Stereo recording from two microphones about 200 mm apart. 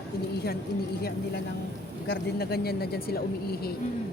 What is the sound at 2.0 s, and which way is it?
Speech, 50° left (ahead or behind).